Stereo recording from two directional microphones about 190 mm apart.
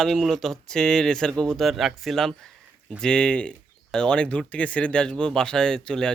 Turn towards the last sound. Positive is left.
turn(degrees=5)  # may be behind; listen again after turning